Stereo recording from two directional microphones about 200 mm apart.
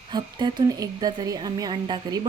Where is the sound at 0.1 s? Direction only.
20° right (ahead or behind).